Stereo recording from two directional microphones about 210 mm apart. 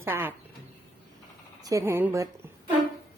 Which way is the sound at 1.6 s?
15° right (ahead or behind).